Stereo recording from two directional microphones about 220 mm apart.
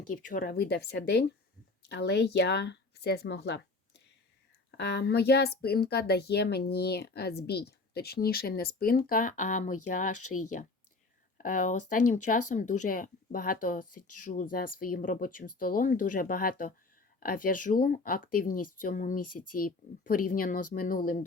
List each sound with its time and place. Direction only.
0.1 s a woman's voice: 40° left (ahead or behind)
11.3 s speech: 35° left (ahead or behind)